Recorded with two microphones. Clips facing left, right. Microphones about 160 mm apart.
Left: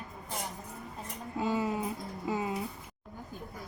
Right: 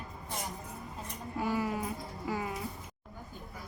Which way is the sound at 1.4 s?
20° left (ahead or behind).